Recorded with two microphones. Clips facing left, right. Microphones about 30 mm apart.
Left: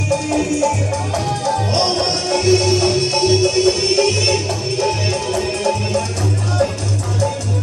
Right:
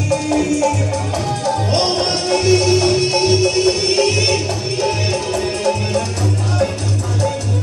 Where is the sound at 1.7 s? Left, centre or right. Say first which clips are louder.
Right 1 dB; centre.